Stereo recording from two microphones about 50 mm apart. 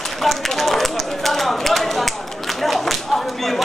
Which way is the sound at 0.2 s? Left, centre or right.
Centre.